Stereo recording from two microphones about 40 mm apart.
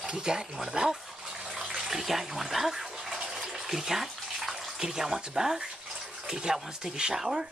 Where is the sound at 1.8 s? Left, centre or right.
Centre.